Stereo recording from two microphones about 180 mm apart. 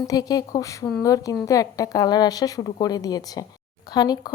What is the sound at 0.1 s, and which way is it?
Speech, 20° left (ahead or behind).